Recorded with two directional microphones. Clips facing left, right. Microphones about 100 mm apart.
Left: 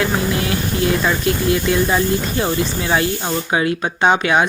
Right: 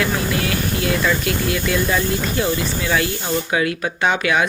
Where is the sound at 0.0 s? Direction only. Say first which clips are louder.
Left 2 dB; 25° left (ahead or behind).